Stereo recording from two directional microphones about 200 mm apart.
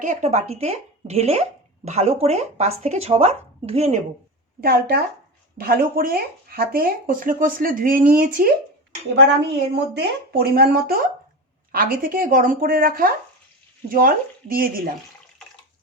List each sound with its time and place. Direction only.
0.0 s speech: 35° right (ahead or behind)
4.6 s speech: 50° right (ahead or behind)
9.1 s speech: 55° right (ahead or behind)